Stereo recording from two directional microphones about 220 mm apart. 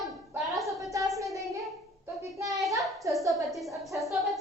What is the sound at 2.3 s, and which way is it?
Hands, 15° right (ahead or behind).